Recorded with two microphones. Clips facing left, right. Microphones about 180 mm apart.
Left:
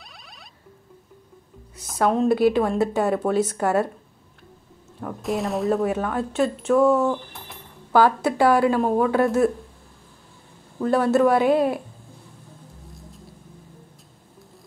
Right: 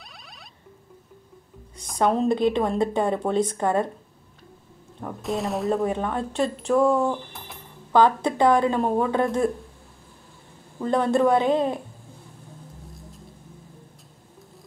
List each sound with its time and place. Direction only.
1.8 s speech: 5° left (ahead or behind)
5.0 s speech: centre (ahead or behind)
10.8 s speech: 5° left (ahead or behind)